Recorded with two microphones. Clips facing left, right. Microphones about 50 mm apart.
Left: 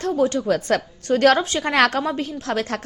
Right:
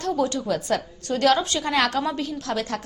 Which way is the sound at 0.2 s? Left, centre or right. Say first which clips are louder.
Left 4 dB; left.